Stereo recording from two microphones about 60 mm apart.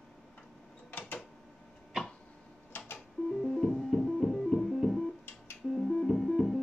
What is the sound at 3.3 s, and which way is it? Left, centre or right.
Music, centre.